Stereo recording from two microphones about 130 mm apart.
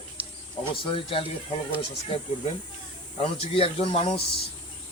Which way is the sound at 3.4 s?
50° left (ahead or behind).